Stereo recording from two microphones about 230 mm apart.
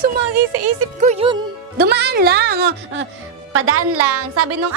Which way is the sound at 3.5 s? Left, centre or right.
Right.